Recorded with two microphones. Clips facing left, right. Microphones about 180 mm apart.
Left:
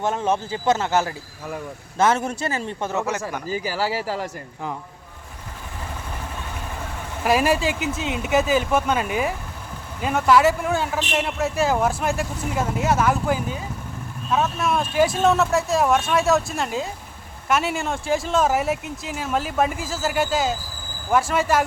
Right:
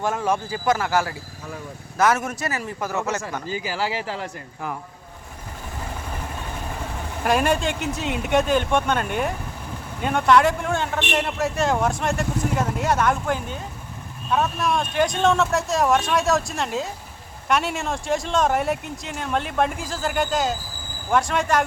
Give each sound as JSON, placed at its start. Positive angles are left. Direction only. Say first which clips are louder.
{"t": 0.0, "sound": "speech", "louder": "left 1 dB", "side_deg": 20}
{"t": 3.1, "sound": "speech", "louder": "left 1 dB", "side_deg": 10}
{"t": 3.5, "sound": "speech", "louder": "left 2 dB", "side_deg": 40}
{"t": 7.3, "sound": "speech", "louder": "left 1 dB", "side_deg": 5}